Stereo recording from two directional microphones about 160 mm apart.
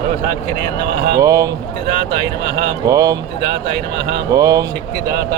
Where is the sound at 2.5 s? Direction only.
90° right.